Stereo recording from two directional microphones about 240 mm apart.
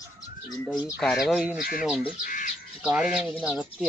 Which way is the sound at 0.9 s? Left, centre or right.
Centre.